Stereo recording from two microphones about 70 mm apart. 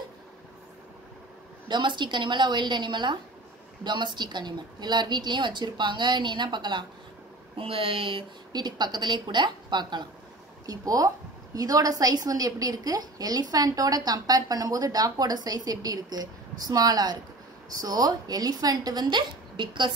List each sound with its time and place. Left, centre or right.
1.7 s a woman's voice: right
8.5 s a woman's voice: right
10.7 s a woman's voice: right